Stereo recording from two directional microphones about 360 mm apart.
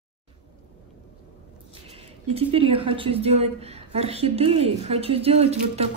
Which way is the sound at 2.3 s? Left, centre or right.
Centre.